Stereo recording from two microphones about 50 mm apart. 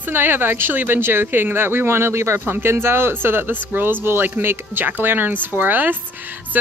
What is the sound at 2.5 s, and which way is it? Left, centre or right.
Speech, right.